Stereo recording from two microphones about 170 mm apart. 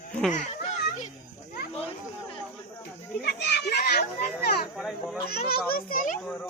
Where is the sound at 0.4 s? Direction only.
45° left (ahead or behind).